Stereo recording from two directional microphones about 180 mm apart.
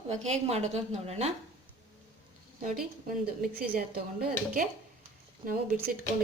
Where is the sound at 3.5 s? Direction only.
55° right (ahead or behind).